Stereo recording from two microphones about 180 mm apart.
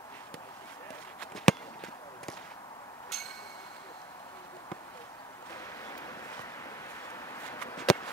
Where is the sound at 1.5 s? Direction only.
Centre (ahead or behind).